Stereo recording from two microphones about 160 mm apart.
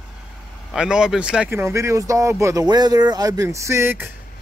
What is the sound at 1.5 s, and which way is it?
Speech, 20° right (ahead or behind).